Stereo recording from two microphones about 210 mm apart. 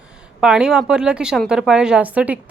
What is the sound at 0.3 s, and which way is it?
A woman's voice, 5° right (ahead or behind).